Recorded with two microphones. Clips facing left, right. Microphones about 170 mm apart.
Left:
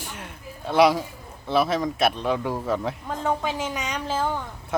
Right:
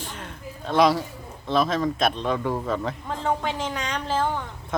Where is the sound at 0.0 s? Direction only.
10° left (ahead or behind).